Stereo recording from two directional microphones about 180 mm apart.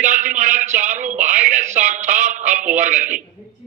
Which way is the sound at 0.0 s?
45° right (ahead or behind).